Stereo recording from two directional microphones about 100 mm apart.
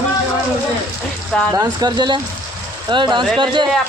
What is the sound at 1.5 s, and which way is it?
Speech, 40° right (ahead or behind).